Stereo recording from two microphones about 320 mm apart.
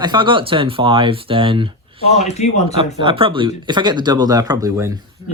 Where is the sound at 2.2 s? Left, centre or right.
Left.